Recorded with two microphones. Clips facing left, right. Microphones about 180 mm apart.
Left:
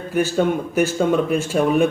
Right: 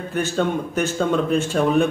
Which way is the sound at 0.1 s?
10° left (ahead or behind).